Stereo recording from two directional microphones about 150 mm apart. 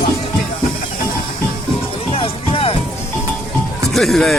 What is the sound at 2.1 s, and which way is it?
Music, 40° left (ahead or behind).